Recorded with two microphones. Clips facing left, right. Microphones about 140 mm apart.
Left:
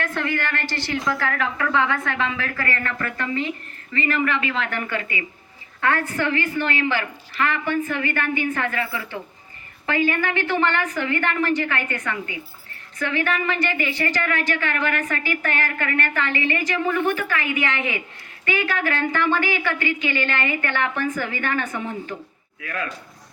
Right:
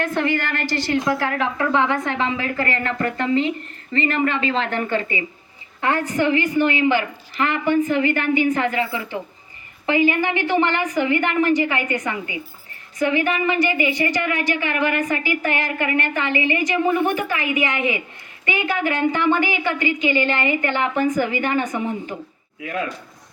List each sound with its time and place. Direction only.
0.0 s a woman's voice: 20° right (ahead or behind)